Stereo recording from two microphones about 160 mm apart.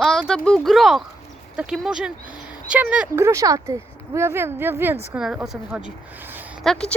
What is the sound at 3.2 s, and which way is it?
Speech, 20° right (ahead or behind).